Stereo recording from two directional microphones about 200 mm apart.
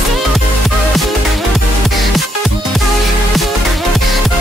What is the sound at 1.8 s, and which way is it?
Music, centre (ahead or behind).